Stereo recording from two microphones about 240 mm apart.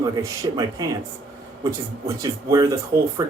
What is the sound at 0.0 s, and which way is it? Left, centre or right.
Speech, centre.